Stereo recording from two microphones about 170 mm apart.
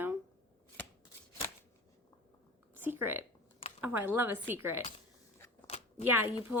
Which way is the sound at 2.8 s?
10° right (ahead or behind).